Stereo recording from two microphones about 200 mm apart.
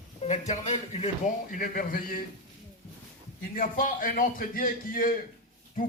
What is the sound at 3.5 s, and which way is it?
Speech, 40° left (ahead or behind).